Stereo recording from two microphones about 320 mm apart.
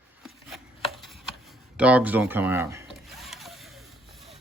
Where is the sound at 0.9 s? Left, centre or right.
Centre.